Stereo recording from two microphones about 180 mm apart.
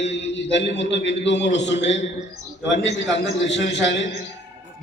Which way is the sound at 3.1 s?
85° left.